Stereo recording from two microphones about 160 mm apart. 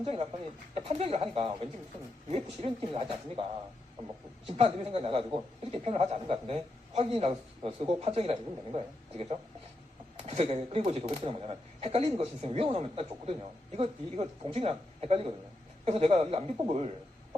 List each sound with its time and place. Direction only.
0.0 s speech: 35° right (ahead or behind)
4.4 s speech: 35° right (ahead or behind)